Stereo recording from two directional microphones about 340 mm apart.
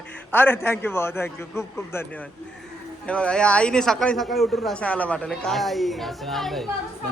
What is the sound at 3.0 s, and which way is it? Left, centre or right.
A man's voice, centre.